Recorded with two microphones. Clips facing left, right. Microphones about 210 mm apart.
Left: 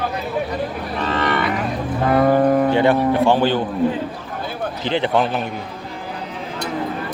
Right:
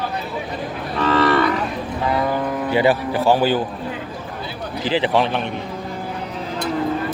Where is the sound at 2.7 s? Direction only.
5° right (ahead or behind).